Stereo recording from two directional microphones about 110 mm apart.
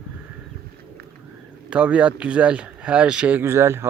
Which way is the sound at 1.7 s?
10° right (ahead or behind).